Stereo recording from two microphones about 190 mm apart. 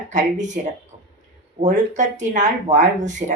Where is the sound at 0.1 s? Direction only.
40° right (ahead or behind).